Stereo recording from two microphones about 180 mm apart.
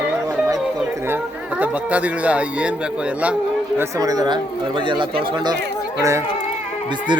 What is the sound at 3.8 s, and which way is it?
Speech, 20° right (ahead or behind).